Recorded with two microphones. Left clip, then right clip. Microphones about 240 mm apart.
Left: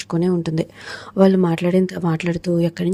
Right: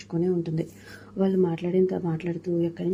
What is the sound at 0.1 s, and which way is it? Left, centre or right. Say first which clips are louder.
Speech: left 5 dB; left.